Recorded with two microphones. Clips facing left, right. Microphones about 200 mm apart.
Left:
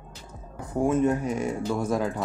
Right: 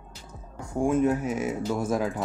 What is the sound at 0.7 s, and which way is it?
Speech, centre (ahead or behind).